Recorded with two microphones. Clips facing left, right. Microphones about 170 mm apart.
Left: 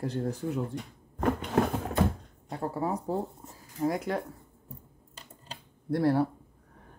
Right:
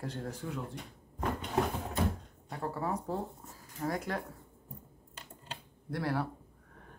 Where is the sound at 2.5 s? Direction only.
20° left (ahead or behind).